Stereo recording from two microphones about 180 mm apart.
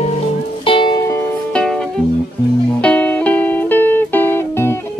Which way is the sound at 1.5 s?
5° left (ahead or behind).